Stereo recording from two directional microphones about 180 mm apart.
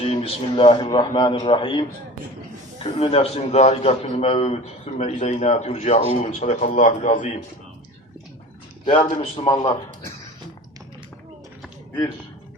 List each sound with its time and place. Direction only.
0.0 s a man's voice: 35° left (ahead or behind)
8.8 s a man's voice: 30° left (ahead or behind)